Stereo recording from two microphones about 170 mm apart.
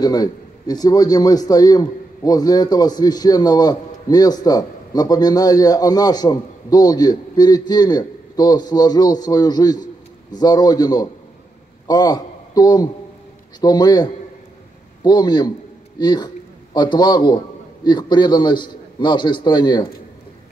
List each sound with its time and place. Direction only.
0.0 s a man's voice: 25° left (ahead or behind)